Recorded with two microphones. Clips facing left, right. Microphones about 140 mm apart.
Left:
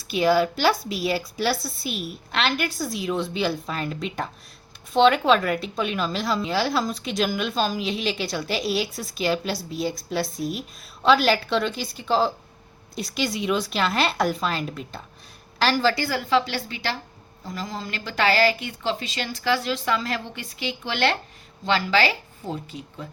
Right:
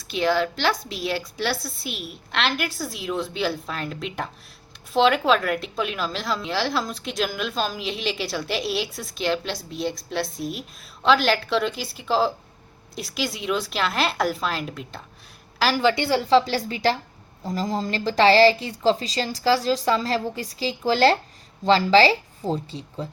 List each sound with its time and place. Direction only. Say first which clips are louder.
0.1 s a woman's voice: left 2 dB; 10° left (ahead or behind)
15.8 s a woman's voice: right 3 dB; 20° right (ahead or behind)
16.4 s speech: right 6 dB; 40° right (ahead or behind)